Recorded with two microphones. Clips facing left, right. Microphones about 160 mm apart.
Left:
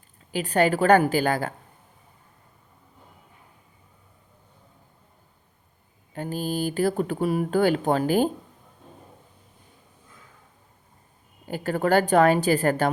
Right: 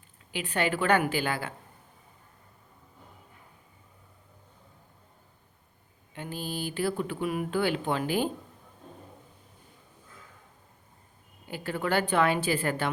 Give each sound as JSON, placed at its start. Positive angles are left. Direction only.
{"t": 0.3, "sound": "a woman's voice", "side_deg": 40}
{"t": 6.1, "sound": "speech", "side_deg": 40}
{"t": 11.4, "sound": "a woman's voice", "side_deg": 45}